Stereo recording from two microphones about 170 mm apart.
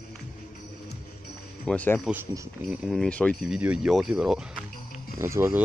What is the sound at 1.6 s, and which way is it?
Speech, 10° left (ahead or behind).